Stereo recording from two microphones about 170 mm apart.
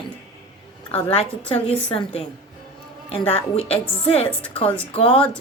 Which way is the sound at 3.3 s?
35° left (ahead or behind).